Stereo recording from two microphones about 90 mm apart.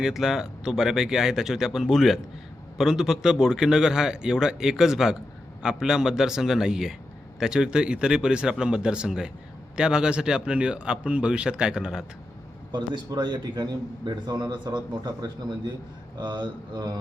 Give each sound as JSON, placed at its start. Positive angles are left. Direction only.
{"t": 0.0, "sound": "a man's voice", "side_deg": -5}
{"t": 13.1, "sound": "a man's voice", "side_deg": -55}